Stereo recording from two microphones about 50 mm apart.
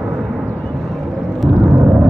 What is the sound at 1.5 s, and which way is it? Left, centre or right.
Vehicle, right.